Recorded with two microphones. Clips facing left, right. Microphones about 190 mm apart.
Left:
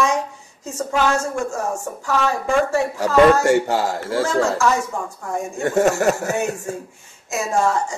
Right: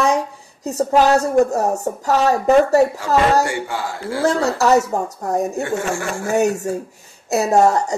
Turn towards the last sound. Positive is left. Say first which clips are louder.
# right 5 dB
turn(degrees=-40)  # may be behind; listen again after turning